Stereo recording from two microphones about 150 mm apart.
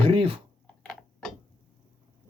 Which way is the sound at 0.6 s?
5° left (ahead or behind).